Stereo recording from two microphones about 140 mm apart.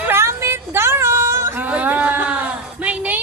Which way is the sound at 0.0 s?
15° right (ahead or behind).